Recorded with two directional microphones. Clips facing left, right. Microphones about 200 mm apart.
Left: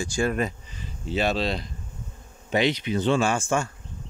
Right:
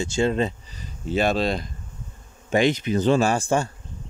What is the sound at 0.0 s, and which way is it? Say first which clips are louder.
Speech: right 3 dB; 25° right (ahead or behind).